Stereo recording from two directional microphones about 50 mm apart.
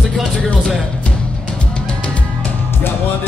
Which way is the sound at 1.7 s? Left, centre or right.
Left.